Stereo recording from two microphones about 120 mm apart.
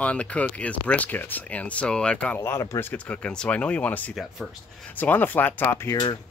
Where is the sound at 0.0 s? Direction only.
10° left (ahead or behind).